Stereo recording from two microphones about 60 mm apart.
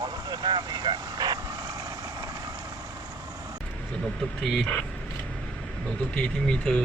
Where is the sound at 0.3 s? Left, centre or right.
Right.